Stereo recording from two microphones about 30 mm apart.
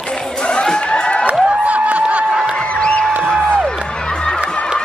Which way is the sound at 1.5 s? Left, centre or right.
Right.